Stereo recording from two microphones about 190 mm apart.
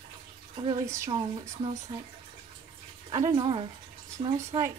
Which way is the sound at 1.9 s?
25° right (ahead or behind).